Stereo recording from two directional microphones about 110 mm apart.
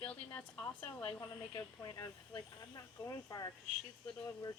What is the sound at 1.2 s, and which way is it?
Speech, 35° left (ahead or behind).